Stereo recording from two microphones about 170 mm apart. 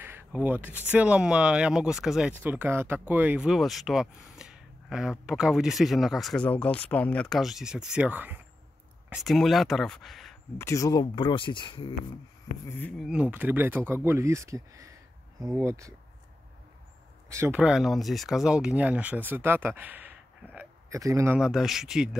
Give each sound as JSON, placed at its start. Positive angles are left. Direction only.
{"t": 0.0, "sound": "speech", "side_deg": -10}
{"t": 9.1, "sound": "speech", "side_deg": 0}
{"t": 10.6, "sound": "speech", "side_deg": 20}
{"t": 12.6, "sound": "speech", "side_deg": 10}
{"t": 13.0, "sound": "speech", "side_deg": -5}
{"t": 17.3, "sound": "speech", "side_deg": -15}
{"t": 21.4, "sound": "speech", "side_deg": -5}